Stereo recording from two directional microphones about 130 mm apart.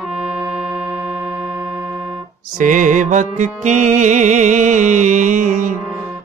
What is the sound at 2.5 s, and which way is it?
Music, 85° right.